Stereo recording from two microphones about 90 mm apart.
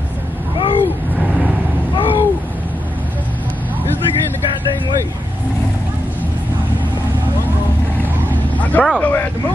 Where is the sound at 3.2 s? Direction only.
15° left (ahead or behind).